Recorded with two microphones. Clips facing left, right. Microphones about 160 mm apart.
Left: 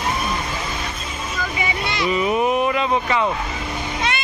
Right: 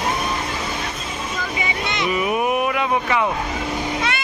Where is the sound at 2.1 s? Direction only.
10° right (ahead or behind).